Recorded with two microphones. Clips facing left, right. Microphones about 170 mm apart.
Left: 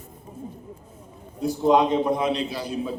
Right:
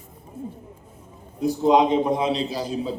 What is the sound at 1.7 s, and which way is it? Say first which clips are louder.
Speech: right 1 dB; 15° right (ahead or behind).